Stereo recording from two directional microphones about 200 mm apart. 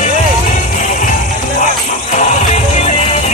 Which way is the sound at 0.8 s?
40° left (ahead or behind).